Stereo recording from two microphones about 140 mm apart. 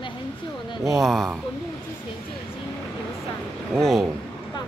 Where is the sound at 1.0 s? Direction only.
Centre (ahead or behind).